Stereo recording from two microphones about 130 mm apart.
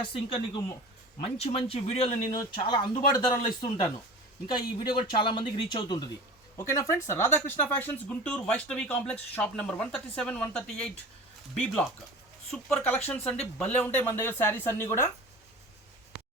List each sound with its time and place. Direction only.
0.0 s speech: 45° left (ahead or behind)
2.6 s speech: 35° left (ahead or behind)
6.6 s speech: 25° left (ahead or behind); by 10.9 s 5° left (ahead or behind)
12.5 s speech: 5° left (ahead or behind)